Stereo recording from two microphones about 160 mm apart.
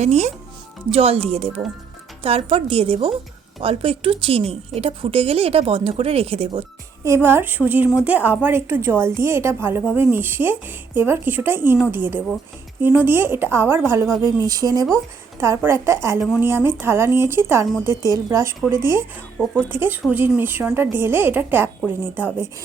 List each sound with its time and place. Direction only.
0.0 s speech: 45° right (ahead or behind)
7.0 s a woman's voice: 15° right (ahead or behind)